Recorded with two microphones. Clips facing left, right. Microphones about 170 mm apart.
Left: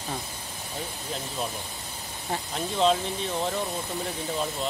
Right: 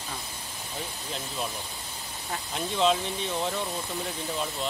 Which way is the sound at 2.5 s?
Centre (ahead or behind).